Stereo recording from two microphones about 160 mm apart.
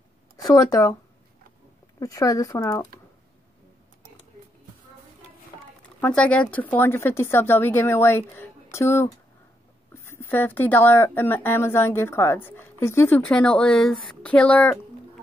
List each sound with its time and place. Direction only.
0.4 s speech: 25° left (ahead or behind)
2.0 s speech: 20° left (ahead or behind)
5.9 s speech: 10° left (ahead or behind)
13.3 s speech: 5° left (ahead or behind)